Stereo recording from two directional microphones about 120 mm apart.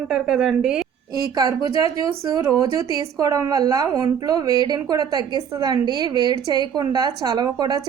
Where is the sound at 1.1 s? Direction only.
30° right (ahead or behind).